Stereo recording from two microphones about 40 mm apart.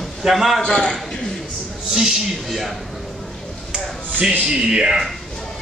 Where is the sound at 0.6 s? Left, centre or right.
Left.